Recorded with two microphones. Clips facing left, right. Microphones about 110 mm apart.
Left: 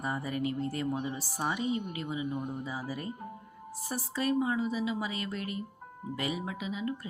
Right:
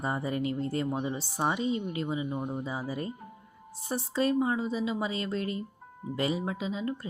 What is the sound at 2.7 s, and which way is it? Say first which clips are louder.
A woman's voice: right 3 dB; 25° right (ahead or behind).